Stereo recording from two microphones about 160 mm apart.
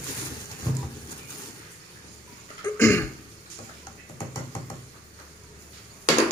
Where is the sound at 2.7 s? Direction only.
15° left (ahead or behind).